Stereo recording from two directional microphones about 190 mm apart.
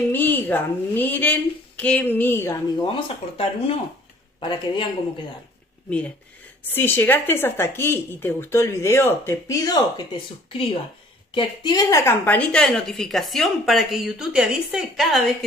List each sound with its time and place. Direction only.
0.1 s speech: 10° left (ahead or behind)
2.8 s speech: 30° left (ahead or behind)
6.7 s a woman's voice: 10° left (ahead or behind)